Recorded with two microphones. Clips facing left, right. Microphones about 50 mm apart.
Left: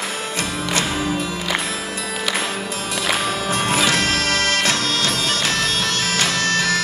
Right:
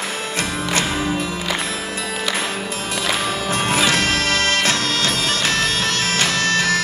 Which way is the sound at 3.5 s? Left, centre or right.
Right.